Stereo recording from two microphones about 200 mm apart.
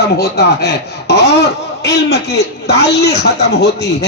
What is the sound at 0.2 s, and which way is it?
A man's voice, 55° left (ahead or behind).